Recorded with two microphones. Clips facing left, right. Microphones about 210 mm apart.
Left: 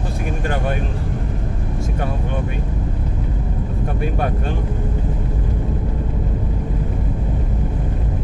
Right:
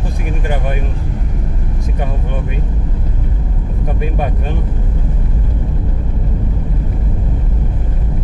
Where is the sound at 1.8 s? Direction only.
15° right (ahead or behind).